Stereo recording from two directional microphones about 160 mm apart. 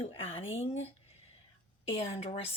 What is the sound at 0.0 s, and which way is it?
Speech, 40° left (ahead or behind).